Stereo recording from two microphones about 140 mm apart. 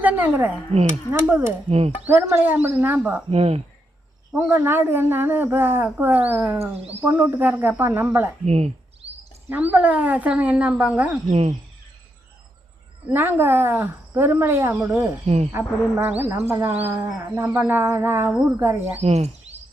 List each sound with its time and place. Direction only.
0.0 s speech: 10° right (ahead or behind)
1.6 s speech: 45° right (ahead or behind)
2.0 s speech: 15° right (ahead or behind)
3.2 s speech: 45° right (ahead or behind)
4.3 s speech: 15° right (ahead or behind)
8.4 s a sound: 50° right (ahead or behind)
9.5 s speech: 10° right (ahead or behind)
11.3 s speech: 50° right (ahead or behind)
13.1 s speech: 15° right (ahead or behind)
19.0 s speech: 50° right (ahead or behind)